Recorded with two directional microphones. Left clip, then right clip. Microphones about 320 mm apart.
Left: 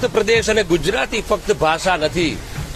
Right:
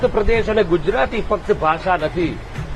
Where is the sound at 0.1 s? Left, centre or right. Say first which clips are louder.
Left 2 dB; left.